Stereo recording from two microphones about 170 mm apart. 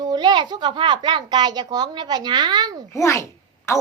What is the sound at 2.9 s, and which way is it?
Speech, 15° left (ahead or behind).